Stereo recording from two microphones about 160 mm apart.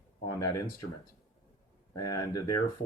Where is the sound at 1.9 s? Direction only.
25° left (ahead or behind).